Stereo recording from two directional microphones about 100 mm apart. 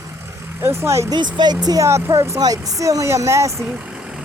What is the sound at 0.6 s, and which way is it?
Speech, 25° right (ahead or behind).